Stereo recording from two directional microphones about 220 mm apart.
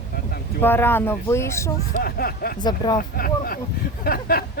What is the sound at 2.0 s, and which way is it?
Speech, 40° left (ahead or behind).